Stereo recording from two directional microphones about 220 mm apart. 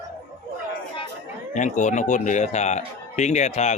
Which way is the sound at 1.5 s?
35° left (ahead or behind).